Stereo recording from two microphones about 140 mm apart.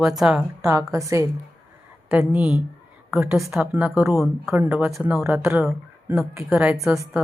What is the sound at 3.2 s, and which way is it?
Speech, 20° right (ahead or behind).